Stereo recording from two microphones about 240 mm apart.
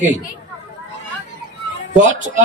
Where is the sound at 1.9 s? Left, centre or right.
Right.